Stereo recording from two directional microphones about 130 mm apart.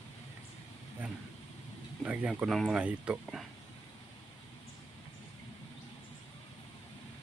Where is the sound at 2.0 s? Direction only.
10° right (ahead or behind).